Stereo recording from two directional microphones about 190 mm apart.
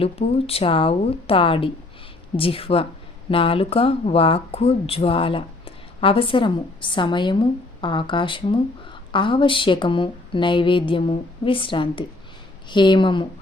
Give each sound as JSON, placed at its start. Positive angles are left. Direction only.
{"t": 0.0, "sound": "speech", "side_deg": 30}